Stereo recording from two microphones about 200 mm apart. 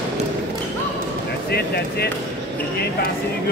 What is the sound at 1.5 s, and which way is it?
Speech, 55° left (ahead or behind).